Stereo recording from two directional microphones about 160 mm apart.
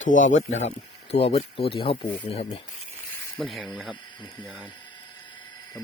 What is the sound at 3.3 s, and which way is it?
Speech, centre (ahead or behind).